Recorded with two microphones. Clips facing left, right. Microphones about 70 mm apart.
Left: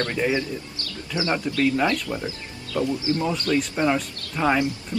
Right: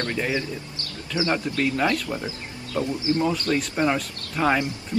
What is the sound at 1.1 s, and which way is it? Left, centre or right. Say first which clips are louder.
Speech: even; right.